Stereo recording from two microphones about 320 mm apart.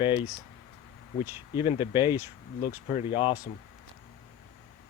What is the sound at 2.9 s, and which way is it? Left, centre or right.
Speech, centre.